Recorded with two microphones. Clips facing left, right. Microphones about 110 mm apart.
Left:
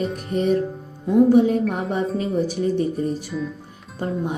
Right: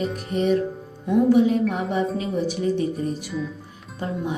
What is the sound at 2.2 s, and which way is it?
Speech, 45° left (ahead or behind).